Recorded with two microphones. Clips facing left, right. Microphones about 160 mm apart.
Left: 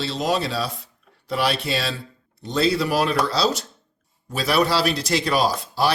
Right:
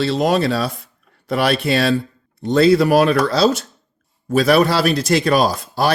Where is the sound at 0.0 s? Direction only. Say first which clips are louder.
Right 7 dB; 55° right (ahead or behind).